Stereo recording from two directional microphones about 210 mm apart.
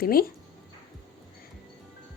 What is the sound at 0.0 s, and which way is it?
Speech, 45° left (ahead or behind).